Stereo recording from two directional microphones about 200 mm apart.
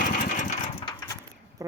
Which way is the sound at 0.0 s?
40° left (ahead or behind).